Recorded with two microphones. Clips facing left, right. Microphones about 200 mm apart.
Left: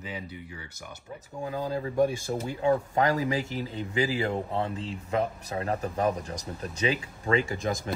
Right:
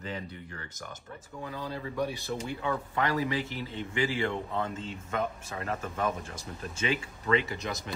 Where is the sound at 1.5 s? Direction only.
45° left (ahead or behind).